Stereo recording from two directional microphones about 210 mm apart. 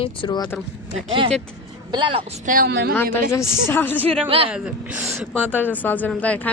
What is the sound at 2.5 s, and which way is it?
Speech, 45° right (ahead or behind).